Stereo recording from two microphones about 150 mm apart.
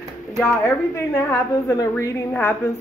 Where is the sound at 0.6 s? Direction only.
15° left (ahead or behind).